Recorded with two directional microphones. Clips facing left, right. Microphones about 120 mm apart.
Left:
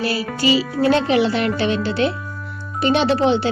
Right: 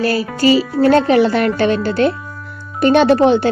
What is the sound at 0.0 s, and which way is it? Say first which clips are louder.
Speech: right 5 dB; 45° right (ahead or behind).